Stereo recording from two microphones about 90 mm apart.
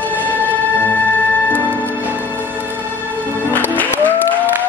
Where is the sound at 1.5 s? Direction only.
20° left (ahead or behind).